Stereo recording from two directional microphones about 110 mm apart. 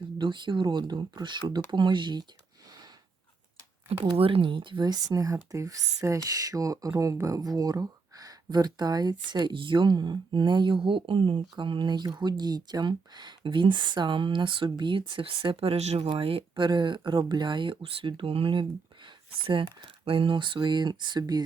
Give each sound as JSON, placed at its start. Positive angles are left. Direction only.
{"t": 0.2, "sound": "speech", "side_deg": -45}
{"t": 4.2, "sound": "speech", "side_deg": -55}
{"t": 16.0, "sound": "speech", "side_deg": -55}
{"t": 16.6, "sound": "speech", "side_deg": -45}